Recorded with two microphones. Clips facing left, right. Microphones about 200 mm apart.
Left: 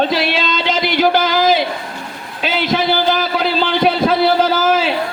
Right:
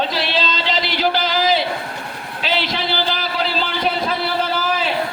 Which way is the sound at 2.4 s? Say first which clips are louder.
Left 5 dB; 50° left (ahead or behind).